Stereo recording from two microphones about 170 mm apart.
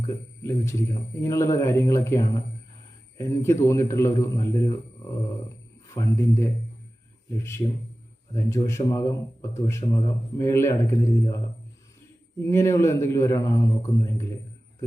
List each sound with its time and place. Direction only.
0.0 s a man's voice: 15° left (ahead or behind)
5.9 s a man's voice: 15° left (ahead or behind)
12.4 s a man's voice: 15° left (ahead or behind)